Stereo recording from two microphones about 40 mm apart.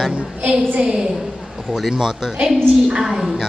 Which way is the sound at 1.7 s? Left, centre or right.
Centre.